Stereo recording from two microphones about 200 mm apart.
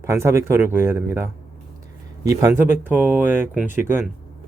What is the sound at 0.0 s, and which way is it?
Speech, 15° right (ahead or behind).